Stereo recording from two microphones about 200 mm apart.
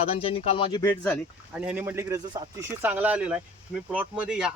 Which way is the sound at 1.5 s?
5° right (ahead or behind).